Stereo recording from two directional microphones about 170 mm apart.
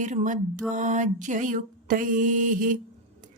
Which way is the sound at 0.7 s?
45° right (ahead or behind).